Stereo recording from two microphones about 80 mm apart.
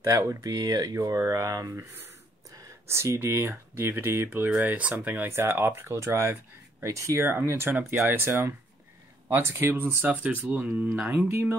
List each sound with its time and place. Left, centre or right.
0.0 s speech: right
0.9 s speech: right
1.8 s speech: right
10.0 s speech: centre